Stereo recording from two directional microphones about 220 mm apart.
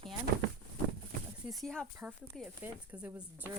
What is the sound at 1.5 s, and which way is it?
Speech, centre (ahead or behind).